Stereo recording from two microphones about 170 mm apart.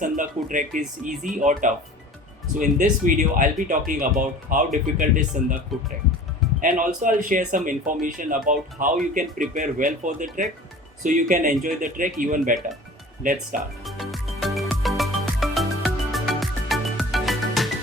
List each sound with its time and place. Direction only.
0.0 s speech: 50° right (ahead or behind)
6.6 s speech: 50° right (ahead or behind)
13.8 s music: centre (ahead or behind)